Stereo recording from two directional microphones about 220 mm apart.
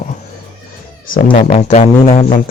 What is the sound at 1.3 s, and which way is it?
Speech, 30° left (ahead or behind).